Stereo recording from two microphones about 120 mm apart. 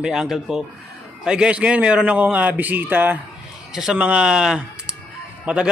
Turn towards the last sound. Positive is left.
turn(degrees=-10)  # may be behind; listen again after turning